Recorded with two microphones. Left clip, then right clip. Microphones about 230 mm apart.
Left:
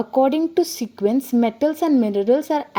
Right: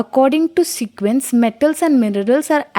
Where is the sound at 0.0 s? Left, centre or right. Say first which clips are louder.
Right 4 dB; right.